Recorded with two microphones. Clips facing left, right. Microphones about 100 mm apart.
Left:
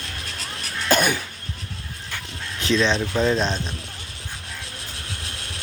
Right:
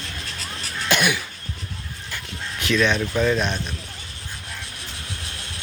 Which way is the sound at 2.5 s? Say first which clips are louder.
Even; 30° left (ahead or behind).